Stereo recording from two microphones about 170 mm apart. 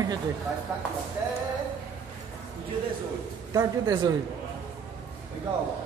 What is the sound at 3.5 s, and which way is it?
Speech, 20° right (ahead or behind).